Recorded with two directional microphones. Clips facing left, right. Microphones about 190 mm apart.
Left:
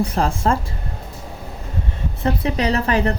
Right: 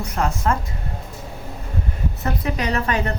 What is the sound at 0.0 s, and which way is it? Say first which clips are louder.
Speech: left 3 dB; 30° left (ahead or behind).